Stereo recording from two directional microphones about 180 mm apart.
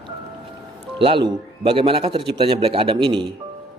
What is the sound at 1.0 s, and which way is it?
A man's voice, 30° right (ahead or behind).